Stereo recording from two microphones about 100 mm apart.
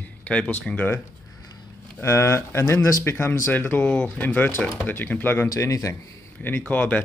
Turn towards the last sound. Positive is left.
turn(degrees=15)  # may be behind; listen again after turning